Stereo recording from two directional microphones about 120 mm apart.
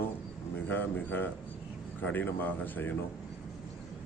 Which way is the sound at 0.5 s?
15° left (ahead or behind).